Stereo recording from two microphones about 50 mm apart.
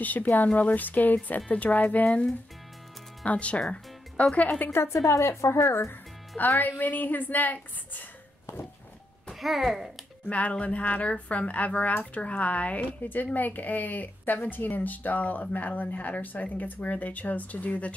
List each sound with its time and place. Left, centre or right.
0.0 s a woman's voice: left
3.3 s speech: left
5.0 s speech: left
5.9 s music: left
6.6 s a woman's voice: left
9.3 s a child's voice: centre
10.2 s a woman's voice: left